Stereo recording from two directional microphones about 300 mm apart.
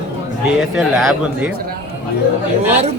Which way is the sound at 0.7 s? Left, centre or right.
Centre.